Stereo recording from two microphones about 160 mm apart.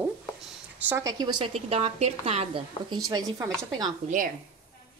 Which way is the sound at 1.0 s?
25° right (ahead or behind).